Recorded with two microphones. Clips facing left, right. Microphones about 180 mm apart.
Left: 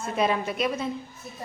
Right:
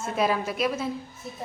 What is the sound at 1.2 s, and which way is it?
Speech, 25° right (ahead or behind).